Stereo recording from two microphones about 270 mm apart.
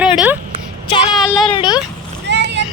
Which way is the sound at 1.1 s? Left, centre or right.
Centre.